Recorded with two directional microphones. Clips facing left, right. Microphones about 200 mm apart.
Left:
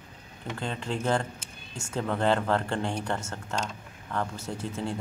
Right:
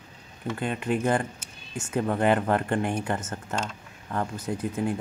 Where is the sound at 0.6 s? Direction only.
15° right (ahead or behind).